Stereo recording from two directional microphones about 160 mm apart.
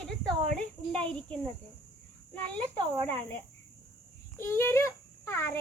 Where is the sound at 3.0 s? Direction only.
10° left (ahead or behind).